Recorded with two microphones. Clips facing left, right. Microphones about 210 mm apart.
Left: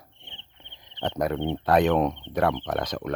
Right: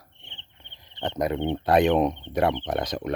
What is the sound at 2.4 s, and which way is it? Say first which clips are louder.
Speech: even; 25° right (ahead or behind).